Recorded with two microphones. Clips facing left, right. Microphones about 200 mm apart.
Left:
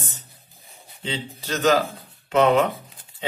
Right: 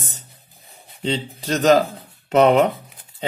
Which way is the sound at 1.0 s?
35° right (ahead or behind).